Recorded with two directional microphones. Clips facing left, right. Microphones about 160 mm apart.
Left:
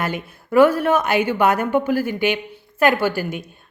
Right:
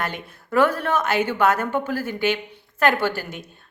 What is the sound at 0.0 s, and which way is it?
A woman's voice, 10° left (ahead or behind).